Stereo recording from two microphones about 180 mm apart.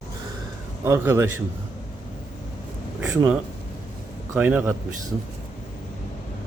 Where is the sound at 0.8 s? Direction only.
15° right (ahead or behind).